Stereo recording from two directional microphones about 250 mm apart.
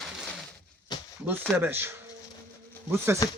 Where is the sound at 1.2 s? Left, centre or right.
Centre.